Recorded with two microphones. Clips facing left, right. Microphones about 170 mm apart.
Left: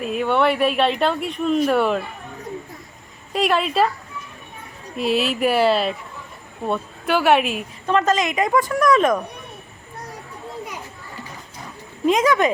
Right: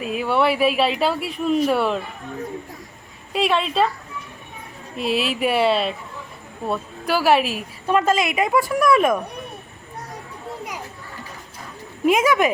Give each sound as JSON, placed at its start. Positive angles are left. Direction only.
{"t": 0.0, "sound": "speech", "side_deg": 0}
{"t": 3.3, "sound": "speech", "side_deg": 0}
{"t": 4.9, "sound": "a woman's voice", "side_deg": 0}
{"t": 12.0, "sound": "a woman's voice", "side_deg": -10}